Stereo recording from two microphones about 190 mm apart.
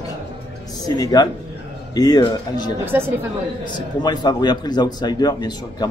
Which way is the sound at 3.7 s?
20° left (ahead or behind).